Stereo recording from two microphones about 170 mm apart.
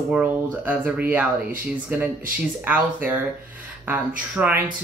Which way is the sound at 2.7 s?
10° right (ahead or behind).